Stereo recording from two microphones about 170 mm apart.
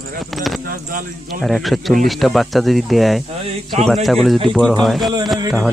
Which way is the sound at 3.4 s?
35° right (ahead or behind).